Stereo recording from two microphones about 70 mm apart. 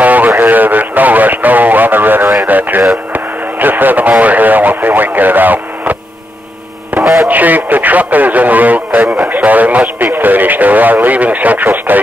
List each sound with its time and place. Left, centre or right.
0.0 s a sound: right
0.4 s speech: right
2.4 s radio: right
3.1 s speech: right
7.0 s radio: centre
7.2 s speech: right
9.0 s a man's voice: centre
9.3 s speech: right